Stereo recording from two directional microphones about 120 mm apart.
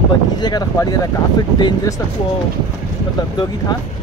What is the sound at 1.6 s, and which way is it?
Speech, 35° left (ahead or behind).